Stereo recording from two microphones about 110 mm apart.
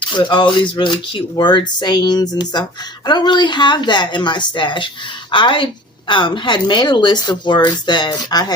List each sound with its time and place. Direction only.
0.1 s speech: 45° left (ahead or behind)